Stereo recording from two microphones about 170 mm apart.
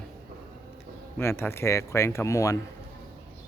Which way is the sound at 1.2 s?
15° left (ahead or behind).